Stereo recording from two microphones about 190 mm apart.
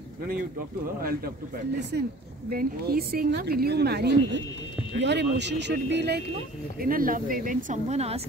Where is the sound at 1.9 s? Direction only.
60° right (ahead or behind).